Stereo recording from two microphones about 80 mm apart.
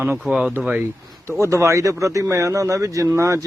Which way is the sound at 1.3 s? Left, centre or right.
Right.